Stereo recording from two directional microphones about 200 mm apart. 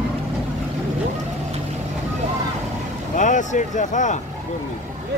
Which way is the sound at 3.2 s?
40° left (ahead or behind).